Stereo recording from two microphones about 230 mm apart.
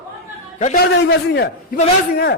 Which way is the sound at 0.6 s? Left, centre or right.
Left.